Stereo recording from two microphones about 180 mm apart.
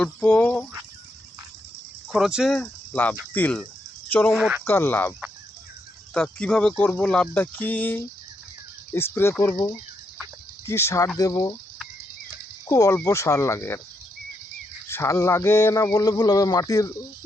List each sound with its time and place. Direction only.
0.0 s speech: 10° left (ahead or behind)
2.1 s speech: centre (ahead or behind)
4.4 s speech: 5° right (ahead or behind)
4.6 s speech: 15° left (ahead or behind)
6.1 s speech: 5° left (ahead or behind)
10.7 s speech: 15° left (ahead or behind)
12.6 s speech: 20° left (ahead or behind)
14.8 s speech: 15° left (ahead or behind)